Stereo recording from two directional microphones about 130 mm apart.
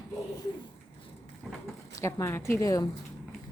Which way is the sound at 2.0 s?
20° left (ahead or behind).